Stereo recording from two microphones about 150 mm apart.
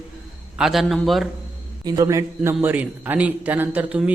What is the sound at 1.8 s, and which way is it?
A man's voice, 25° right (ahead or behind).